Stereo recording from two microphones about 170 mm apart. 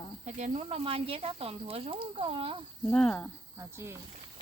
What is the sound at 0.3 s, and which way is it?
Speech, 45° right (ahead or behind).